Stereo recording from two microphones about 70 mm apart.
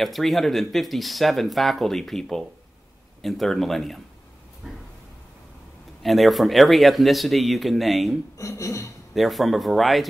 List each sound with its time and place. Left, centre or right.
0.0 s speech: centre
4.6 s a sound: centre
6.0 s speech: centre
8.4 s speech: left
9.1 s speech: centre